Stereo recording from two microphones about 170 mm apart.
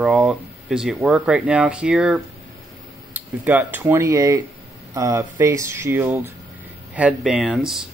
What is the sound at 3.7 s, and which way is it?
A man's voice, 15° right (ahead or behind).